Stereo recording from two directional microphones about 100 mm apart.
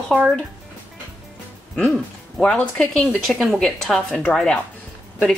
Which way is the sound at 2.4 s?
10° left (ahead or behind).